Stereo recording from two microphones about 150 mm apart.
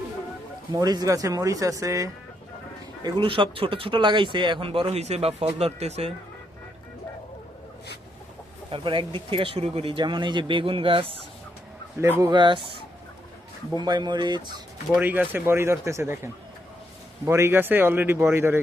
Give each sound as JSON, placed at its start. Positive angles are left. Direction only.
{"t": 0.7, "sound": "speech", "side_deg": -25}
{"t": 3.0, "sound": "speech", "side_deg": -35}
{"t": 8.7, "sound": "speech", "side_deg": -35}
{"t": 12.2, "sound": "speech", "side_deg": -30}
{"t": 14.9, "sound": "speech", "side_deg": -10}